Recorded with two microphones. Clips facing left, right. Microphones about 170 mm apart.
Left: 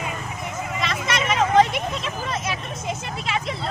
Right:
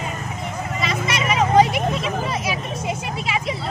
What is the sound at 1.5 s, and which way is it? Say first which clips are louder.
Vehicle: right 3 dB; 5° right (ahead or behind).